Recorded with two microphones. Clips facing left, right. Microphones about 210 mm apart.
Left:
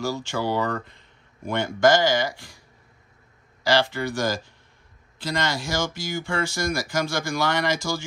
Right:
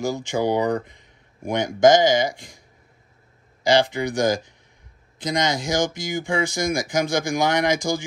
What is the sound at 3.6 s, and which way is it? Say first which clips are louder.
Speech: right 3 dB; 20° right (ahead or behind).